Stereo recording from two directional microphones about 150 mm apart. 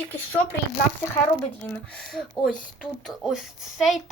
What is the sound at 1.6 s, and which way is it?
A woman's voice, 10° left (ahead or behind).